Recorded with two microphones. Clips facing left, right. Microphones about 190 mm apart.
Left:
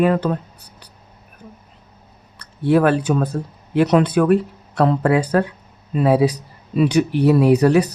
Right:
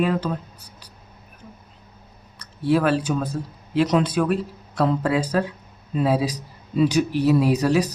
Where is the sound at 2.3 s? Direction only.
55° left (ahead or behind).